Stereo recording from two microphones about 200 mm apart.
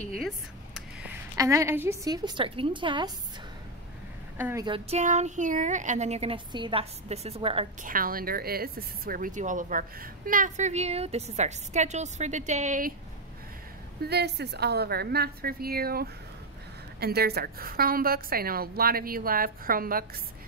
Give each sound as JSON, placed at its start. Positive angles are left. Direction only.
{"t": 1.3, "sound": "a woman's voice", "side_deg": -15}
{"t": 4.4, "sound": "a woman's voice", "side_deg": -10}
{"t": 4.6, "sound": "speech", "side_deg": -30}
{"t": 7.8, "sound": "speech", "side_deg": -45}
{"t": 14.0, "sound": "a woman's voice", "side_deg": -55}